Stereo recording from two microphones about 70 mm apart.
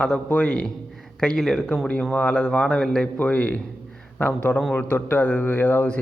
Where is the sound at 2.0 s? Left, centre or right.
Centre.